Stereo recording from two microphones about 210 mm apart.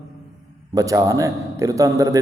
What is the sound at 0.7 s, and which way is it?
A man's voice, 15° right (ahead or behind).